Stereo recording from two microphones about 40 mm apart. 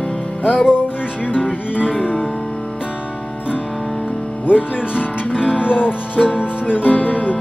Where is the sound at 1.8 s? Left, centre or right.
Right.